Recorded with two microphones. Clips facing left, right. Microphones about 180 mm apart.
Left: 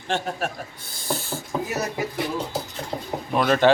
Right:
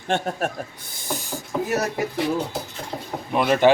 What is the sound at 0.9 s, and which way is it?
Snake, 15° right (ahead or behind).